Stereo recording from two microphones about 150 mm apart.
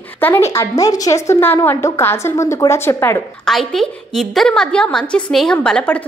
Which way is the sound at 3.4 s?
Centre (ahead or behind).